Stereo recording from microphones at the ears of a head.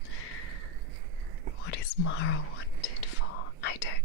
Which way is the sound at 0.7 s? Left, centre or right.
Right.